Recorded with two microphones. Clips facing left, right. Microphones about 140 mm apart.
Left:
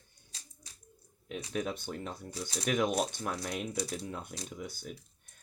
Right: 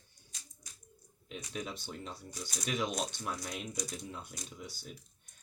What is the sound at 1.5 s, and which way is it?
Speech, 50° left (ahead or behind).